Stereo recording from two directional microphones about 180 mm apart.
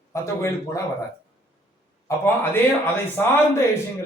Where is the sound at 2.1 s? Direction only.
15° left (ahead or behind).